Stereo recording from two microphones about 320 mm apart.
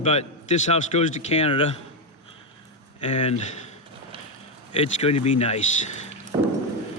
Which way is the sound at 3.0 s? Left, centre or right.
Left.